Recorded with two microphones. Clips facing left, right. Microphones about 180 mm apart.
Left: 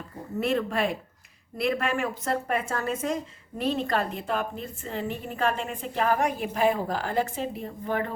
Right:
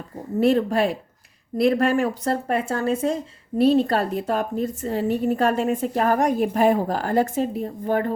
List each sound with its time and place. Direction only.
0.3 s a woman's voice: 35° right (ahead or behind)